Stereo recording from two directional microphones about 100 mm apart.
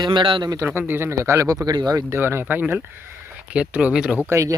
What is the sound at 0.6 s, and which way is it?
Speech, 20° right (ahead or behind).